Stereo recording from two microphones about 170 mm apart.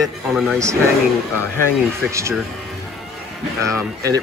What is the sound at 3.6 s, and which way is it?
Speech, 20° right (ahead or behind).